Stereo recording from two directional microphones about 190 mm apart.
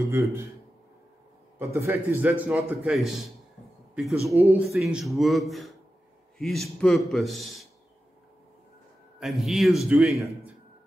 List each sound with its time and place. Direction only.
0.1 s a man's voice: 15° right (ahead or behind)
1.6 s a man's voice: 15° right (ahead or behind)
9.2 s a man's voice: centre (ahead or behind)
10.1 s a man's voice: 15° right (ahead or behind)